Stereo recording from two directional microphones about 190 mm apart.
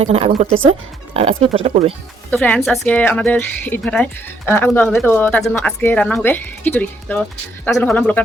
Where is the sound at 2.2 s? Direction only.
5° left (ahead or behind).